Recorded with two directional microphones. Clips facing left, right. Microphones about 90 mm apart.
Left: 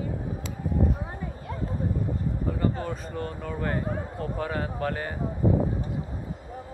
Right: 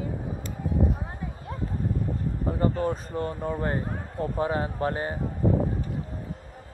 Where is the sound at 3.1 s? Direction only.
30° right (ahead or behind).